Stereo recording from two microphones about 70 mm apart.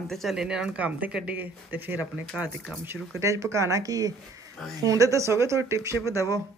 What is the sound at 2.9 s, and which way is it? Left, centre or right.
Speech, right.